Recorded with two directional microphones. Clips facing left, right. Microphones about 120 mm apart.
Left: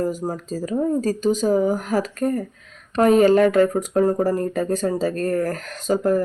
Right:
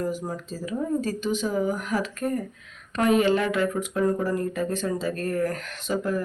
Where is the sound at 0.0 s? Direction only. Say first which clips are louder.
Left 5 dB; 40° left (ahead or behind).